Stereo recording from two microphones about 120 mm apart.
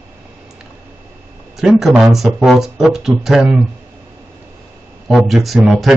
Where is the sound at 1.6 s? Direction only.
5° right (ahead or behind).